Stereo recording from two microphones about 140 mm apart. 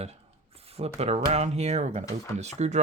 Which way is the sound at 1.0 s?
50° right (ahead or behind).